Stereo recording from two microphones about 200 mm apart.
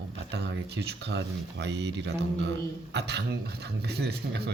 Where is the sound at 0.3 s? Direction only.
60° right (ahead or behind).